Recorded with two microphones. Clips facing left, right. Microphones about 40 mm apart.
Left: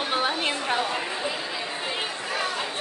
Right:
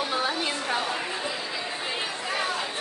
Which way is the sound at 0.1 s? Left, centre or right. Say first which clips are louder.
Left 2 dB; left.